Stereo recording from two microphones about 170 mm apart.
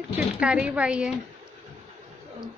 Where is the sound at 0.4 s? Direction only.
5° right (ahead or behind).